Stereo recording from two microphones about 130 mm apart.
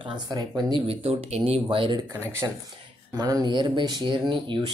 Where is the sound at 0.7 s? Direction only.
50° right (ahead or behind).